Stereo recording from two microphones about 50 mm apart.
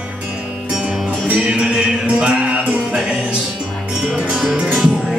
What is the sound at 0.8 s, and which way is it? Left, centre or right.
Music, right.